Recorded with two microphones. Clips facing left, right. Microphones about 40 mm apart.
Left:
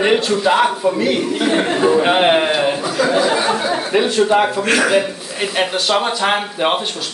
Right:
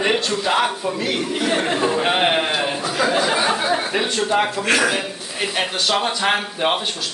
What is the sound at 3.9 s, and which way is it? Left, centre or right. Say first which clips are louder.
A man's voice: left 6 dB; centre.